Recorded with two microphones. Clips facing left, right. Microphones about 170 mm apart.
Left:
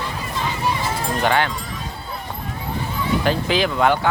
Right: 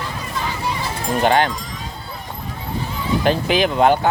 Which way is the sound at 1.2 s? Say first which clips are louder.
Right 4 dB; 30° right (ahead or behind).